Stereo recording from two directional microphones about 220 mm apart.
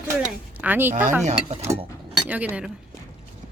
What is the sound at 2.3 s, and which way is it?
Speech, 5° right (ahead or behind).